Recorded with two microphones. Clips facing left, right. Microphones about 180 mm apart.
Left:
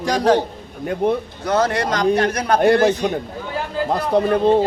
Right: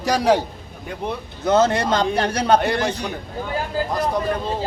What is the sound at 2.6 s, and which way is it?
Speech, 50° left (ahead or behind).